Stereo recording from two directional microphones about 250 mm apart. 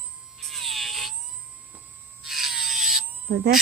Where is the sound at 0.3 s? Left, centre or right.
Centre.